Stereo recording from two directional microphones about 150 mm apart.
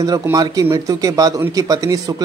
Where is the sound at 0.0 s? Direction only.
25° right (ahead or behind).